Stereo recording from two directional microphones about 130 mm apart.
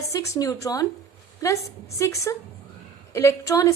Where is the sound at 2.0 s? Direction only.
25° left (ahead or behind).